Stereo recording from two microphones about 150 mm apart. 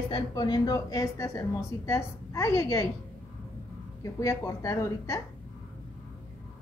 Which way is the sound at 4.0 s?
25° left (ahead or behind).